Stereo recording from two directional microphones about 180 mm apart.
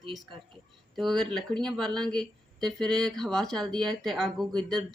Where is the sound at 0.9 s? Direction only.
Centre (ahead or behind).